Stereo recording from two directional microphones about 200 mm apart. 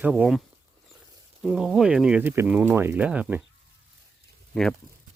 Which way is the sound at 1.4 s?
Centre (ahead or behind).